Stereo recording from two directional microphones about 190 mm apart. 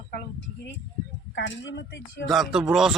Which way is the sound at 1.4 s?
65° left (ahead or behind).